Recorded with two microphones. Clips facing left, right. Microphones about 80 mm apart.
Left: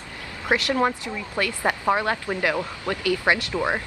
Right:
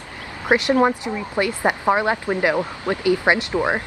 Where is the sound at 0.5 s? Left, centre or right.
Right.